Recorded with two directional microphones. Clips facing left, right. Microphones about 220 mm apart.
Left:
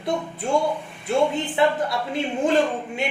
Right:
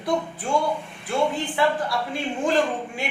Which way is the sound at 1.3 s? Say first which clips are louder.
Left 2 dB; 20° left (ahead or behind).